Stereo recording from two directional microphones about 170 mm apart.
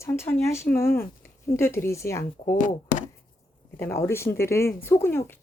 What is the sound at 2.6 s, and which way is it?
Speech, 50° left (ahead or behind).